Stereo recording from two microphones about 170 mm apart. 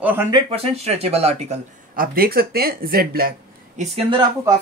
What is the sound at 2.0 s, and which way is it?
Speech, 60° right (ahead or behind).